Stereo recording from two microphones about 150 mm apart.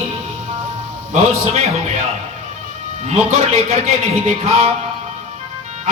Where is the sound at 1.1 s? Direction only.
45° right (ahead or behind).